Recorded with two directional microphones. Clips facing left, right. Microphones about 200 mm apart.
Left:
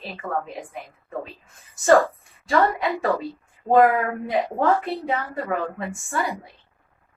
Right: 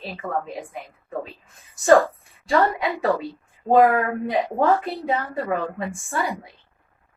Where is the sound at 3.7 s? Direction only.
Centre (ahead or behind).